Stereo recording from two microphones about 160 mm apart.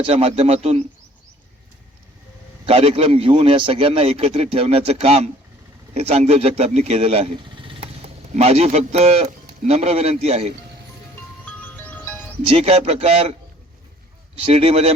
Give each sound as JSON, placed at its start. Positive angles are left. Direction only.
{"t": 0.1, "sound": "a man's voice", "side_deg": -40}
{"t": 2.6, "sound": "a man's voice", "side_deg": -40}
{"t": 11.9, "sound": "music", "side_deg": 10}
{"t": 12.5, "sound": "a man's voice", "side_deg": -40}
{"t": 14.5, "sound": "a man's voice", "side_deg": -40}